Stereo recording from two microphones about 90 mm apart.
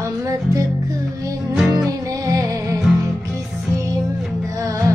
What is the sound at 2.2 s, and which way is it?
Music, 40° right (ahead or behind).